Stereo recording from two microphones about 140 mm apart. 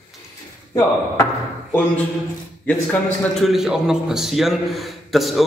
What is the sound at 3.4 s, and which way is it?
A man's voice, 5° right (ahead or behind).